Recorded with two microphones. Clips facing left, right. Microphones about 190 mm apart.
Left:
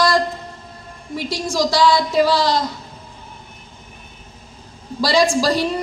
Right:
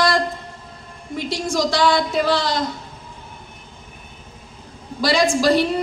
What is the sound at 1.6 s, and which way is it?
A woman's voice, 55° right (ahead or behind).